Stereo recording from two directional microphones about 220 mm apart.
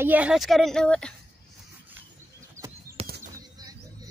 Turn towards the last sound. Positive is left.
turn(degrees=-25)  # may be behind; listen again after turning